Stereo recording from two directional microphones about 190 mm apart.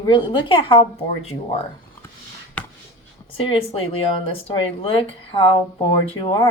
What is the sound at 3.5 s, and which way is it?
Speech, 30° left (ahead or behind).